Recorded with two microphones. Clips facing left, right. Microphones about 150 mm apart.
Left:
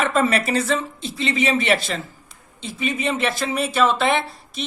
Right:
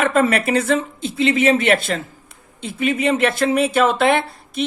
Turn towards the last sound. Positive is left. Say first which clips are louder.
# right 4 dB
turn(degrees=-55)  # may be behind; listen again after turning